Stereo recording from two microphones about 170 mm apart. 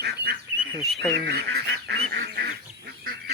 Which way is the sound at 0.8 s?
Centre (ahead or behind).